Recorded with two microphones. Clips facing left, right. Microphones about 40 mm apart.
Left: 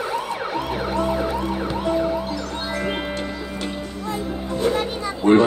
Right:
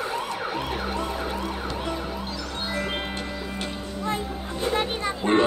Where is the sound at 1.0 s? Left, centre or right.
Left.